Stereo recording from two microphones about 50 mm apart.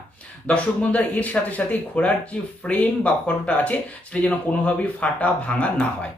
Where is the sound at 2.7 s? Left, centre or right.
Left.